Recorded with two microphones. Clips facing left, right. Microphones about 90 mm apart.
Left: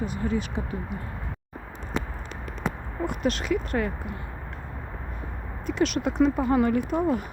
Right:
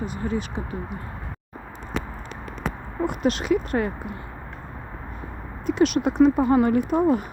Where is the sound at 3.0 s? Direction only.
15° right (ahead or behind).